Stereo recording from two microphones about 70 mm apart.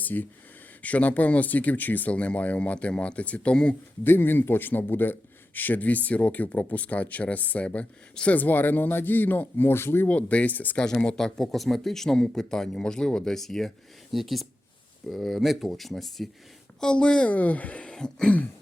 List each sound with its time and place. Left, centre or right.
0.0 s speech: left
4.0 s speech: left
10.1 s speech: centre
10.8 s speech: centre
16.8 s speech: centre